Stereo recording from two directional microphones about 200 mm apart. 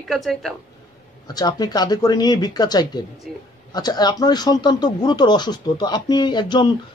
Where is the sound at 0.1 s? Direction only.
Centre (ahead or behind).